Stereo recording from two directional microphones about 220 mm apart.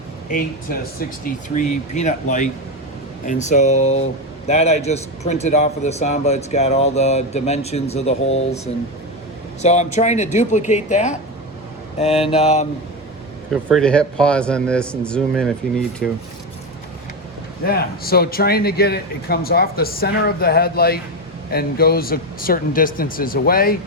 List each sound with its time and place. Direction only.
0.3 s a man's voice: 40° left (ahead or behind)
13.5 s a man's voice: centre (ahead or behind)
17.7 s speech: 45° left (ahead or behind)